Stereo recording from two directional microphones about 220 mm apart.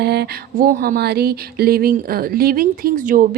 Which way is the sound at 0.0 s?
50° right (ahead or behind).